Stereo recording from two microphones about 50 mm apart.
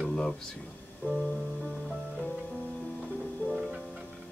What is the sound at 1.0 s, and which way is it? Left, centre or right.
Music, left.